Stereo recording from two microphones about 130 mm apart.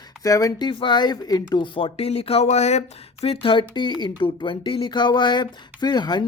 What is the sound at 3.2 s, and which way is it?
Speech, 45° left (ahead or behind).